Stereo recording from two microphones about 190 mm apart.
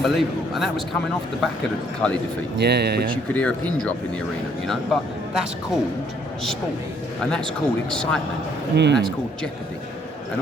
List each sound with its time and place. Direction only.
0.0 s speech: centre (ahead or behind)
2.0 s speech: 5° left (ahead or behind)
2.6 s speech: 60° right (ahead or behind)
3.1 s speech: 5° left (ahead or behind)
7.2 s speech: 5° left (ahead or behind)
8.7 s speech: 65° right (ahead or behind)
9.0 s speech: 5° left (ahead or behind)